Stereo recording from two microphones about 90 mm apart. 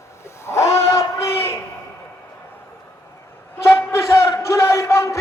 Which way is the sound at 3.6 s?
30° left (ahead or behind).